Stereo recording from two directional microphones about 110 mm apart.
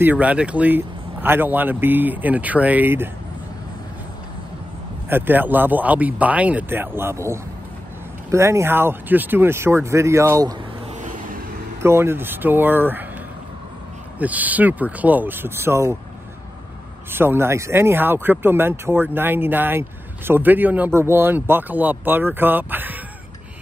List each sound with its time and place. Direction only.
0.0 s speech: 15° right (ahead or behind)
5.1 s speech: 15° right (ahead or behind)
11.8 s speech: 25° right (ahead or behind)
14.1 s speech: 15° right (ahead or behind)
17.1 s speech: 20° right (ahead or behind)